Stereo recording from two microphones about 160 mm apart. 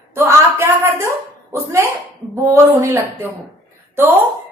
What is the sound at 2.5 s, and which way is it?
Speech, 20° right (ahead or behind).